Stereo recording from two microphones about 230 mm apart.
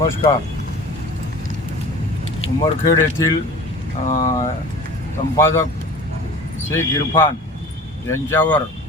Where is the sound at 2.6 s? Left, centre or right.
Centre.